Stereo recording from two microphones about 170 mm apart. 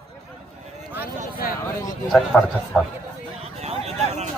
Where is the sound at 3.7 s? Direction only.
40° right (ahead or behind).